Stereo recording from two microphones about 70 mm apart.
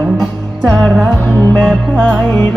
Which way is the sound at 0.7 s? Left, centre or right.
Centre.